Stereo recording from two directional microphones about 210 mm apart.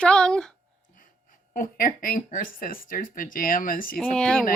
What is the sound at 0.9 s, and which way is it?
Speech, 40° left (ahead or behind).